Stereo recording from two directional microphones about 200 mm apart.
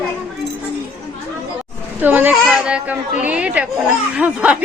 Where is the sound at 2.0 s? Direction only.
10° right (ahead or behind).